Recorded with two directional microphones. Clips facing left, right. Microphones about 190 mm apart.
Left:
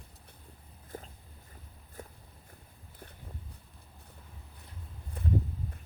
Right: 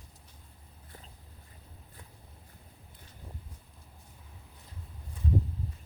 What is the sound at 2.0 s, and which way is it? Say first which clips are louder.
Vehicle: left 10 dB; 45° left (ahead or behind).